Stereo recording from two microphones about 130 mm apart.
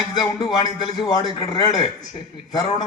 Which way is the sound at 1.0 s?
30° left (ahead or behind).